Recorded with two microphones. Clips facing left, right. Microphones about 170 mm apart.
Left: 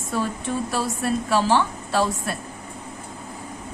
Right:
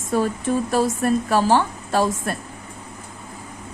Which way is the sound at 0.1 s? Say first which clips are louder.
Right 5 dB; 45° right (ahead or behind).